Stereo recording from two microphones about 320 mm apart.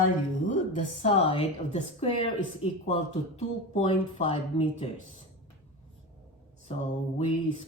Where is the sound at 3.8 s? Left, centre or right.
Centre.